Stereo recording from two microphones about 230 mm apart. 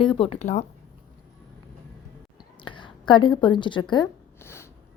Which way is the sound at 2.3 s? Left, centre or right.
Centre.